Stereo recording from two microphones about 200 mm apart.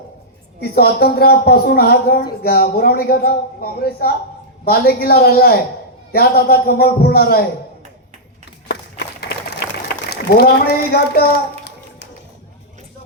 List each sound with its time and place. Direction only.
0.6 s speech: 50° left (ahead or behind)
9.9 s a child's voice: 55° left (ahead or behind)